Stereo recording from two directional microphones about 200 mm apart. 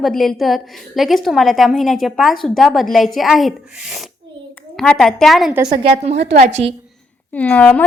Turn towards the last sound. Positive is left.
turn(degrees=10)  # may be behind; listen again after turning